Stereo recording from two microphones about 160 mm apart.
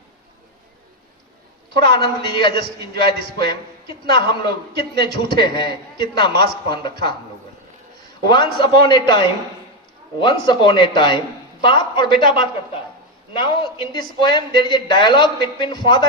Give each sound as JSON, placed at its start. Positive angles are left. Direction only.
{"t": 1.7, "sound": "a man's voice", "side_deg": 30}
{"t": 8.3, "sound": "a man's voice", "side_deg": 30}